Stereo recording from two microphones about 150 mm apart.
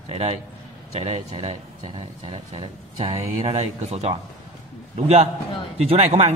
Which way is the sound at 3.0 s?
45° right (ahead or behind).